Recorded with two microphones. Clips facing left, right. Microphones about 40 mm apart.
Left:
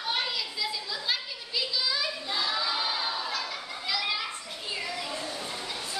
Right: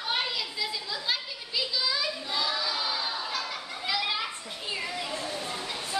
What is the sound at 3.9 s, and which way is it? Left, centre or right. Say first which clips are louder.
Children playing: right 1 dB; centre.